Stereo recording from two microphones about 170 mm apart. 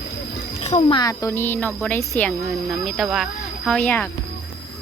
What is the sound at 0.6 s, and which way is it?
Speech, 40° left (ahead or behind).